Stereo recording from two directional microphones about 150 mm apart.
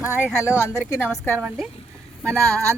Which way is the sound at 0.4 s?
15° left (ahead or behind).